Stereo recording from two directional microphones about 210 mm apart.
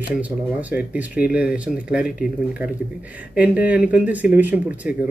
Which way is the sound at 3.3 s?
5° right (ahead or behind).